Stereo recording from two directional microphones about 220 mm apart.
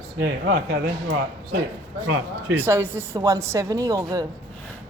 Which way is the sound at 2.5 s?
10° right (ahead or behind).